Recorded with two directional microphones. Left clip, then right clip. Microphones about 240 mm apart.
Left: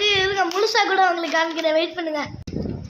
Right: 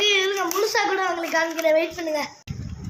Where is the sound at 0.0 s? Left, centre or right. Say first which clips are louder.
Left 1 dB; left.